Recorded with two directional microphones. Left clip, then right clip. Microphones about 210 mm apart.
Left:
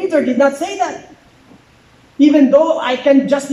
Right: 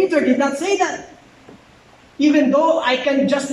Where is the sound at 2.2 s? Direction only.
35° left (ahead or behind).